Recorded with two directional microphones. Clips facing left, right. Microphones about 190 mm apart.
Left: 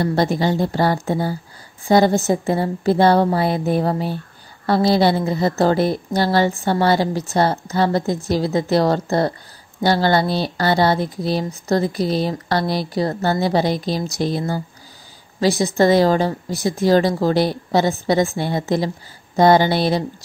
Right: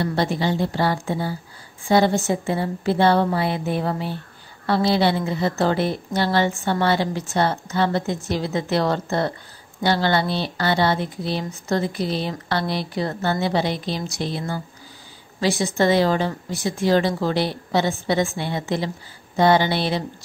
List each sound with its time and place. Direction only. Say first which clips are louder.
0.0 s speech: left 4 dB; 40° left (ahead or behind)